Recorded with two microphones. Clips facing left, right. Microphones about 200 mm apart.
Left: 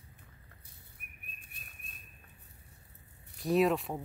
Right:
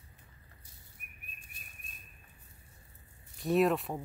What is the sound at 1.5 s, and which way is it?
Bird flight, 60° left (ahead or behind).